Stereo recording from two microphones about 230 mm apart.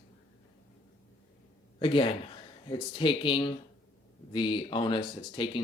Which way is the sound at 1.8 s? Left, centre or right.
Left.